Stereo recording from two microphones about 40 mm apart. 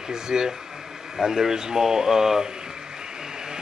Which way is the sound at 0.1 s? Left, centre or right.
Centre.